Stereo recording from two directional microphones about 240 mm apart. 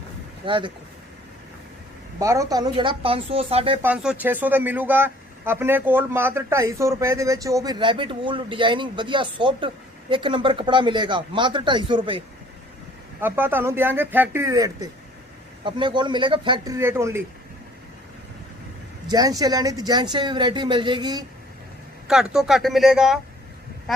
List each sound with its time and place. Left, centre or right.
0.4 s speech: right
2.1 s speech: centre
3.8 s speech: centre
13.2 s speech: centre
19.0 s speech: centre
22.0 s speech: centre